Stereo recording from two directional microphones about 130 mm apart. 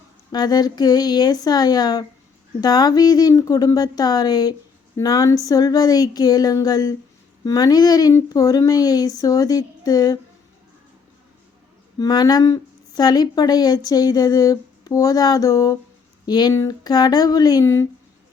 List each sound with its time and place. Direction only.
0.3 s a woman's voice: 30° left (ahead or behind)
11.9 s a woman's voice: 30° left (ahead or behind)